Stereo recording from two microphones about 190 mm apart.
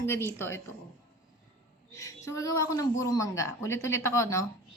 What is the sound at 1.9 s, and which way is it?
A woman's voice, 15° left (ahead or behind).